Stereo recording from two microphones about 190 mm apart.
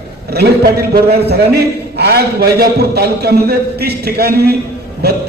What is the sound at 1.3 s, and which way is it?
A man's voice, 55° right (ahead or behind).